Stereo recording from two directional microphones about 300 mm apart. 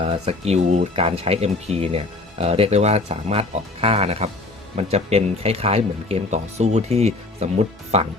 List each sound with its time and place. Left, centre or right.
0.0 s speech: centre